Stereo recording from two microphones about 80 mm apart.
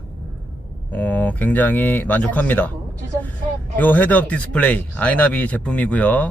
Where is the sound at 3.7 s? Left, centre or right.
Left.